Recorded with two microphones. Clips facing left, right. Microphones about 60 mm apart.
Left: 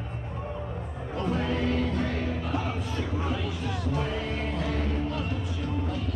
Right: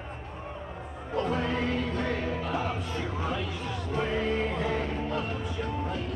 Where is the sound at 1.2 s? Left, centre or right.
Centre.